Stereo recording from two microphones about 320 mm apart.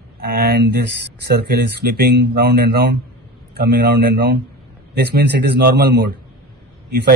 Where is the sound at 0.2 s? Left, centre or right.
Right.